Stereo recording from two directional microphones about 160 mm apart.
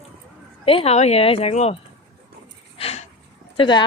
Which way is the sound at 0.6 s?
40° left (ahead or behind).